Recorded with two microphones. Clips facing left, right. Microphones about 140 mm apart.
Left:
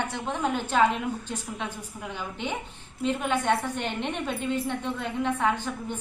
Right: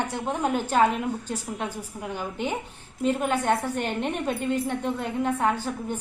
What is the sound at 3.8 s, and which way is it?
Speech, 45° right (ahead or behind).